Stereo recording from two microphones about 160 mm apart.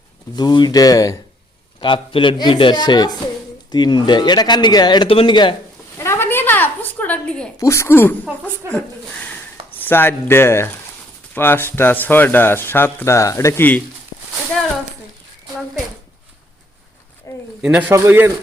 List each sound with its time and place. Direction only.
0.3 s speech: 25° left (ahead or behind)
1.8 s speech: 30° left (ahead or behind)
6.0 s a sound: 15° left (ahead or behind)
7.6 s speech: 15° left (ahead or behind)
9.7 s speech: 10° left (ahead or behind)
17.3 s a sound: 20° left (ahead or behind)
17.6 s a man's voice: 10° right (ahead or behind)